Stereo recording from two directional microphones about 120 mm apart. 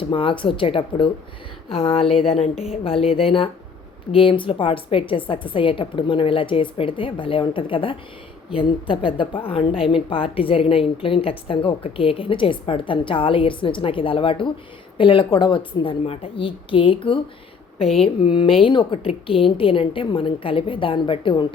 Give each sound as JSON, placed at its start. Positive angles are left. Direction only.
{"t": 0.0, "sound": "a woman's voice", "side_deg": 45}
{"t": 17.8, "sound": "speech", "side_deg": 0}
{"t": 18.2, "sound": "a woman's voice", "side_deg": 45}